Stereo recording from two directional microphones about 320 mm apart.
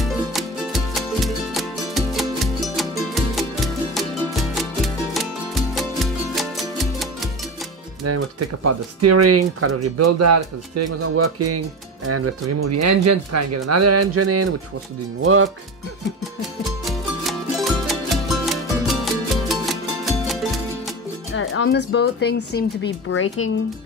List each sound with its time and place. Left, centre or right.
0.0 s music: centre
8.0 s speech: right
15.2 s music: right
16.8 s music: centre
21.4 s speech: left